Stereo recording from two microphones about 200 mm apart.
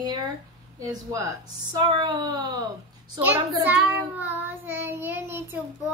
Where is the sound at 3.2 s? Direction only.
10° right (ahead or behind).